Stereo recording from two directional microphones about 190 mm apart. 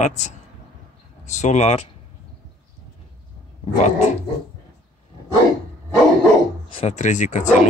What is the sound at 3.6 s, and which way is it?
Dog, 35° left (ahead or behind).